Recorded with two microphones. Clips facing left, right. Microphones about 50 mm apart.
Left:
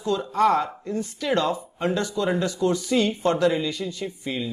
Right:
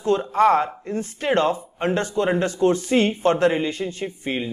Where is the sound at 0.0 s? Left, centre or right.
Right.